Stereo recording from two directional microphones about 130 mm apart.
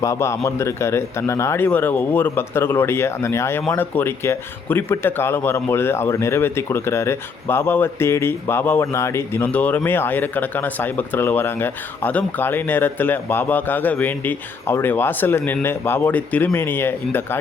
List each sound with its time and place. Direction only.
0.0 s a man's voice: 20° left (ahead or behind)